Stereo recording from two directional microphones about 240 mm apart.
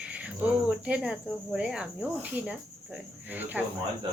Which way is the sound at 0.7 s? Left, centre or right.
Centre.